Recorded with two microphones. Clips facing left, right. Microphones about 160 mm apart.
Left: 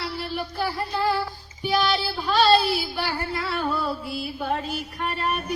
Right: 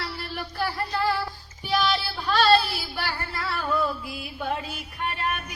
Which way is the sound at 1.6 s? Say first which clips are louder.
Left 2 dB; centre (ahead or behind).